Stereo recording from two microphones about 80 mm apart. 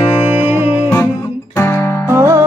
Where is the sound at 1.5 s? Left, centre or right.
Left.